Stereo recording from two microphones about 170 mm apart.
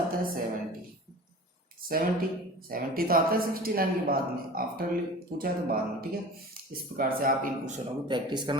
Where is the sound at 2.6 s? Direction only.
60° right (ahead or behind).